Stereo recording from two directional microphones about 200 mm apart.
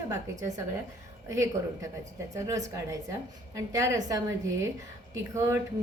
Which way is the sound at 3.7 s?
15° right (ahead or behind).